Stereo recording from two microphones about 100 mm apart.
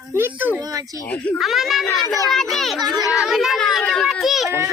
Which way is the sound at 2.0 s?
35° left (ahead or behind).